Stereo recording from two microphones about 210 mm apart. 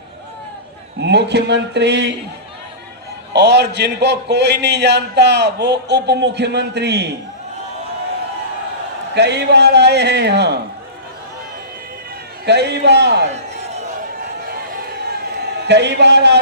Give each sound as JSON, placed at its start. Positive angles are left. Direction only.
{"t": 0.9, "sound": "a man's voice", "side_deg": -55}
{"t": 3.3, "sound": "a man's voice", "side_deg": -55}
{"t": 9.1, "sound": "a man's voice", "side_deg": -55}
{"t": 12.5, "sound": "a man's voice", "side_deg": -55}
{"t": 14.5, "sound": "a sound", "side_deg": -45}